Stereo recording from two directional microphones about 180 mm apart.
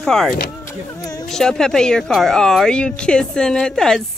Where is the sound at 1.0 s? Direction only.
20° left (ahead or behind).